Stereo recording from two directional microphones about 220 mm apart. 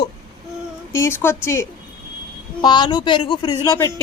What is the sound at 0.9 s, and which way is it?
A woman's voice, 10° left (ahead or behind).